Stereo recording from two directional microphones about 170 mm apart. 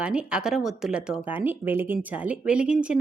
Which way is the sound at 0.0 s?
5° right (ahead or behind).